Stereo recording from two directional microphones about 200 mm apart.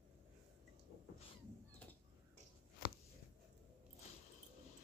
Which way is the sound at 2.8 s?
45° left (ahead or behind).